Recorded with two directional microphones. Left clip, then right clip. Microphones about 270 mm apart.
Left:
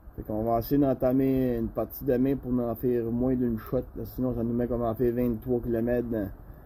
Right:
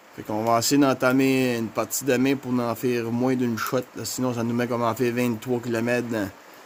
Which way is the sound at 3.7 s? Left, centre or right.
Right.